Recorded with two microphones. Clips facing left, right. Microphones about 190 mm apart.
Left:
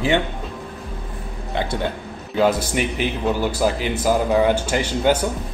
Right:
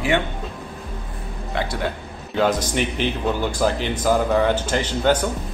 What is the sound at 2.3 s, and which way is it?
Speech, 5° left (ahead or behind).